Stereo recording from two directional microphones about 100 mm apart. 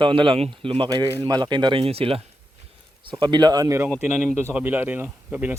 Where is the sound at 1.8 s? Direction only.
75° right (ahead or behind).